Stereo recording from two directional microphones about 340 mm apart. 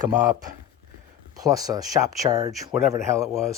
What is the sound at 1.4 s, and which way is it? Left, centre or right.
Speech, centre.